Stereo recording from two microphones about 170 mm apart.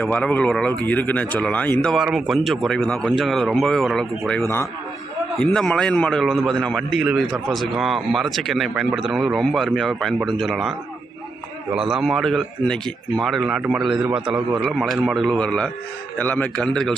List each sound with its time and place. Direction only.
0.0 s speech: 10° left (ahead or behind)
4.4 s a man's voice: 15° left (ahead or behind)
5.4 s a man's voice: 5° left (ahead or behind)